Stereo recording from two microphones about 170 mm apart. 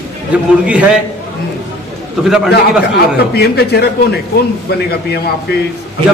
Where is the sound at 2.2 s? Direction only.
5° right (ahead or behind).